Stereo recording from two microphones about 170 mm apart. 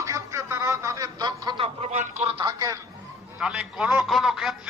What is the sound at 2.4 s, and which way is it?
Speech, 20° right (ahead or behind).